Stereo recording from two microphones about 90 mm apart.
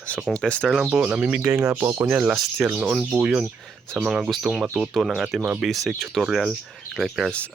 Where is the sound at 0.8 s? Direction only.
15° right (ahead or behind).